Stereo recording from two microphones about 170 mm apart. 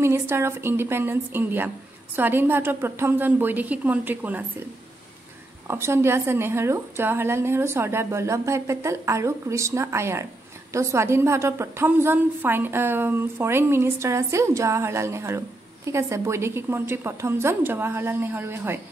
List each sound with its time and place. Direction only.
0.0 s a woman's voice: 15° right (ahead or behind)
5.7 s a woman's voice: 15° right (ahead or behind)